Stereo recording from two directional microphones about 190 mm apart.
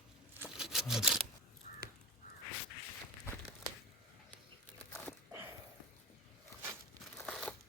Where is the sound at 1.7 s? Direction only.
40° left (ahead or behind).